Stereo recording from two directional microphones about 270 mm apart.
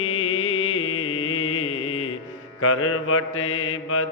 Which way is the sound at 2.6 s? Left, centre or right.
Left.